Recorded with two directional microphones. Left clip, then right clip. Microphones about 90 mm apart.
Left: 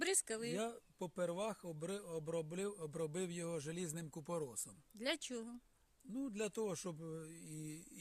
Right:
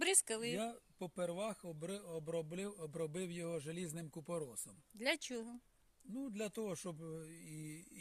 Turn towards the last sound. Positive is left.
turn(degrees=35)  # may be behind; listen again after turning